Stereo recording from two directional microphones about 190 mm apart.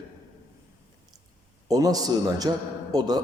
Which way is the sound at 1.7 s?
20° right (ahead or behind).